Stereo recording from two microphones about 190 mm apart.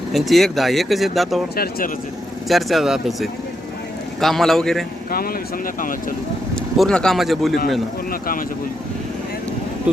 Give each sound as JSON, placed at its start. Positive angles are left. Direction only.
{"t": 0.1, "sound": "speech", "side_deg": 0}
{"t": 1.5, "sound": "speech", "side_deg": 55}
{"t": 2.5, "sound": "speech", "side_deg": 0}
{"t": 6.7, "sound": "speech", "side_deg": 5}
{"t": 8.1, "sound": "speech", "side_deg": 45}
{"t": 9.9, "sound": "speech", "side_deg": -5}